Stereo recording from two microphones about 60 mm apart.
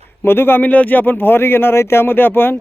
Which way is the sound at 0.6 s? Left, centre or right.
Left.